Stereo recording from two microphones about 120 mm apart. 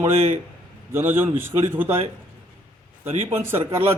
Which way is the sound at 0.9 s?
20° right (ahead or behind).